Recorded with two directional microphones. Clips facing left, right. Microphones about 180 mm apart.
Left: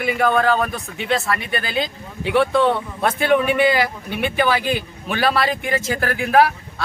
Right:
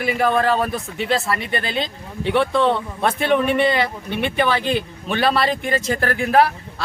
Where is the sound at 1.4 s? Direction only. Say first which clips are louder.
Right 1 dB; 30° right (ahead or behind).